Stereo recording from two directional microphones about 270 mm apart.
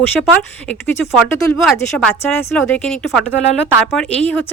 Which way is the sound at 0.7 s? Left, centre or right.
Centre.